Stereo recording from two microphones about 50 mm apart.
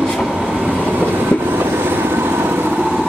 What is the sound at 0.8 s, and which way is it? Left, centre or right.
Vehicle, right.